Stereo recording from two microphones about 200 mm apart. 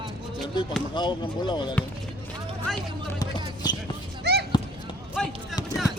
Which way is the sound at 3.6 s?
20° left (ahead or behind).